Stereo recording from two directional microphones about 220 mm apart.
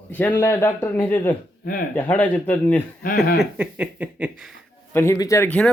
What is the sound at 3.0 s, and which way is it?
Speech, 40° left (ahead or behind).